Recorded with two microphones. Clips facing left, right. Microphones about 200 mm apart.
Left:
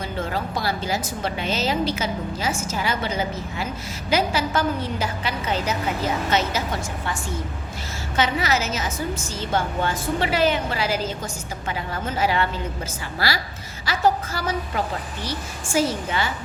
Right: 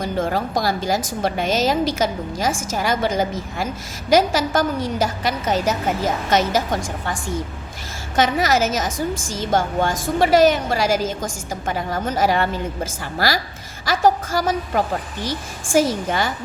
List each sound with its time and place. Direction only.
0.0 s a woman's voice: 45° right (ahead or behind)
8.1 s a woman's voice: 45° right (ahead or behind)
16.0 s a woman's voice: 45° right (ahead or behind)